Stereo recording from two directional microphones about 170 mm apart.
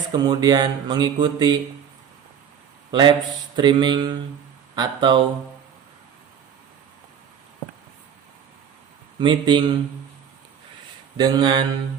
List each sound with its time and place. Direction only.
0.1 s speech: 25° right (ahead or behind)
2.9 s speech: 25° right (ahead or behind)
9.1 s speech: 30° right (ahead or behind)
11.2 s speech: 25° right (ahead or behind)